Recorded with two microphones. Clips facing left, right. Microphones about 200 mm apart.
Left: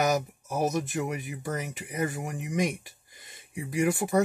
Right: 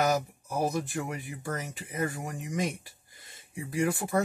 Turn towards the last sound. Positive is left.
turn(degrees=20)  # may be behind; listen again after turning